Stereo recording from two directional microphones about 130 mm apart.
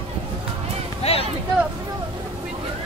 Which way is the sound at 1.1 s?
55° left (ahead or behind).